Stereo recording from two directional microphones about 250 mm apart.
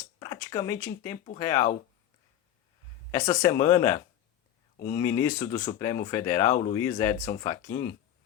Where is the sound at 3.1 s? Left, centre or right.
Centre.